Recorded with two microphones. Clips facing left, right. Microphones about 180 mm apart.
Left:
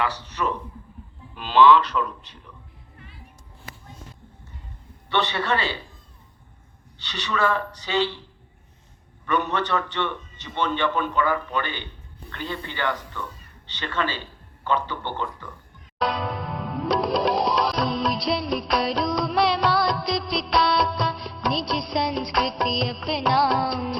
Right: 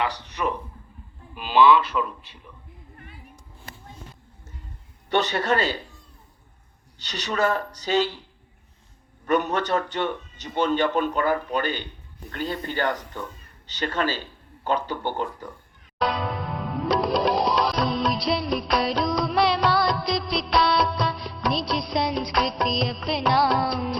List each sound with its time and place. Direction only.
0.0 s speech: 15° right (ahead or behind)
5.0 s a man's voice: 45° right (ahead or behind)
7.0 s a man's voice: 45° right (ahead or behind)
9.2 s a man's voice: 45° right (ahead or behind)
16.0 s music: centre (ahead or behind)